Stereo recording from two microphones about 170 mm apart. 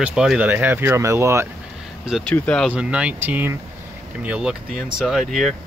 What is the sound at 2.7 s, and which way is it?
Speech, 5° right (ahead or behind).